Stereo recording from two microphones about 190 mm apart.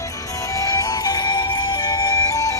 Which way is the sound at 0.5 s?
20° left (ahead or behind).